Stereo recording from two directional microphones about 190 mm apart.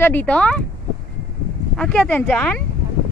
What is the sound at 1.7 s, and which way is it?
Speech, 5° left (ahead or behind).